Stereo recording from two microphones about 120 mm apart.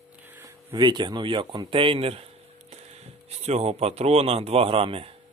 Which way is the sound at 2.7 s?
65° right (ahead or behind).